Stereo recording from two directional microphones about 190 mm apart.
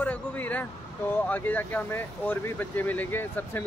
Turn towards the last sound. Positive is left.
turn(degrees=10)  # may be behind; listen again after turning